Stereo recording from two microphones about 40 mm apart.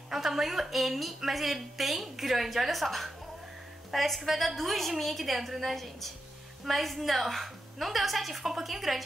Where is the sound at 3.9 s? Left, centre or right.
Centre.